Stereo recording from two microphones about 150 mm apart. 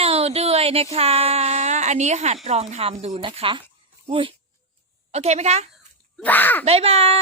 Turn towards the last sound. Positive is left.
turn(degrees=-40)  # may be behind; listen again after turning